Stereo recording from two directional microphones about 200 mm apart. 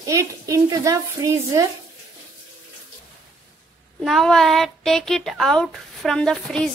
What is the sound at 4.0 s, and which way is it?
Speech, centre (ahead or behind).